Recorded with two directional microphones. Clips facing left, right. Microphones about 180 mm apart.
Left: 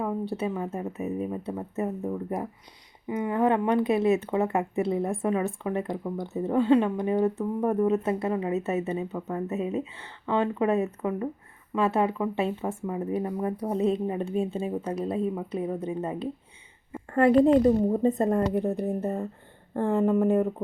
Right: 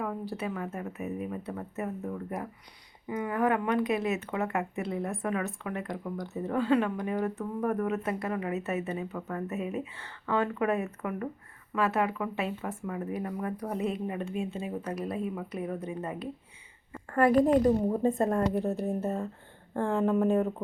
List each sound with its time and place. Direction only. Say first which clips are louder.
0.0 s a woman's voice: left 5 dB; 25° left (ahead or behind)